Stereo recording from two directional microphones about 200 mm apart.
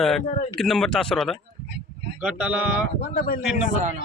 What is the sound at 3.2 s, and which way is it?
Speech, 45° left (ahead or behind).